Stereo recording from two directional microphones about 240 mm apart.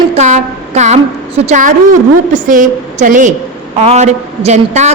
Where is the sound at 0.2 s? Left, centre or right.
Right.